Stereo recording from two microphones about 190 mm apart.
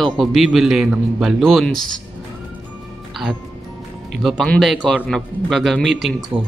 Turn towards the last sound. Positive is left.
turn(degrees=-5)  # may be behind; listen again after turning